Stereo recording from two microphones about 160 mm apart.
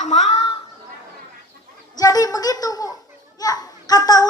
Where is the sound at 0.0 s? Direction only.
45° left (ahead or behind).